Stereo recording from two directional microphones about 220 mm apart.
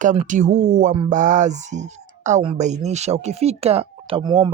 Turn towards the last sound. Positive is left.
turn(degrees=-25)  # may be behind; listen again after turning